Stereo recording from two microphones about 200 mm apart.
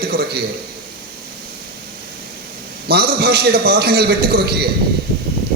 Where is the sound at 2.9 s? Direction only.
50° right (ahead or behind).